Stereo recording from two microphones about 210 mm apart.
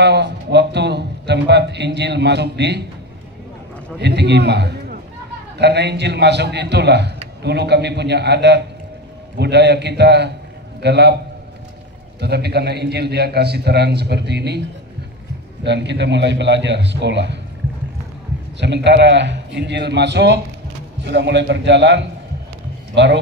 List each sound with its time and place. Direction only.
0.0 s a man's voice: 55° right (ahead or behind)
4.0 s a man's voice: 55° right (ahead or behind)
12.2 s a man's voice: 50° right (ahead or behind)
15.6 s a man's voice: 55° right (ahead or behind)
18.6 s a man's voice: 55° right (ahead or behind)